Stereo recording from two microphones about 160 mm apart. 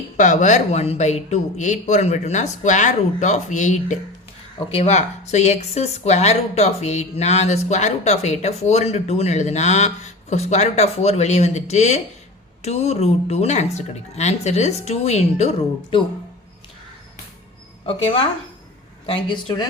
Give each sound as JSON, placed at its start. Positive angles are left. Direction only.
{"t": 0.2, "sound": "speech", "side_deg": 50}
{"t": 4.5, "sound": "speech", "side_deg": 40}
{"t": 17.8, "sound": "speech", "side_deg": 35}